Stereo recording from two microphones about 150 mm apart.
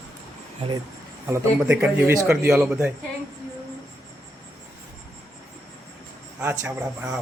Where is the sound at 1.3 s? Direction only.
15° right (ahead or behind).